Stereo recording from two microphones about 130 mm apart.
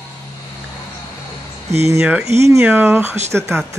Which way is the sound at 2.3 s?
20° right (ahead or behind).